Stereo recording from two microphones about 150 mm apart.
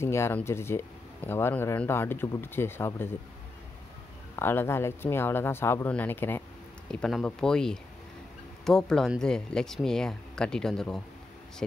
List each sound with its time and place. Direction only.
0.0 s speech: 15° left (ahead or behind)
4.4 s speech: 15° left (ahead or behind)
6.9 s speech: 5° left (ahead or behind)